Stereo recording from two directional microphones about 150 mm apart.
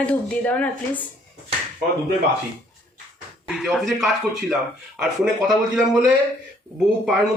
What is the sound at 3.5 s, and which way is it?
Speech, centre (ahead or behind).